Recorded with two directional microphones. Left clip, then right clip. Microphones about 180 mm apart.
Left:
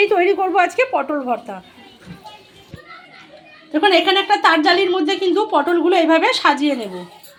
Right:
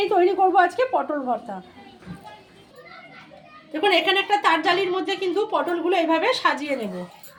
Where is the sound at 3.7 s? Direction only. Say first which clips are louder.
Left 5 dB; 30° left (ahead or behind).